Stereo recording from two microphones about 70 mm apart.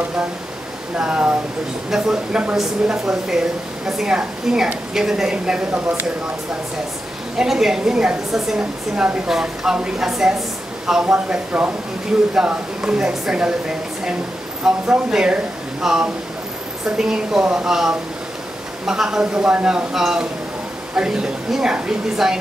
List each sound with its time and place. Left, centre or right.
0.9 s a woman's voice: centre
7.3 s a woman's voice: centre